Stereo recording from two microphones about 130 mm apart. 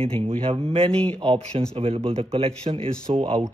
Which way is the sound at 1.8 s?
45° right (ahead or behind).